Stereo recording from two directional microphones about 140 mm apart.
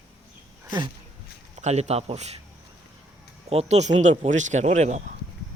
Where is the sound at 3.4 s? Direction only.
50° right (ahead or behind).